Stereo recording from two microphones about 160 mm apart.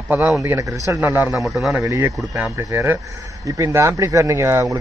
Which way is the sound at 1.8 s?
20° right (ahead or behind).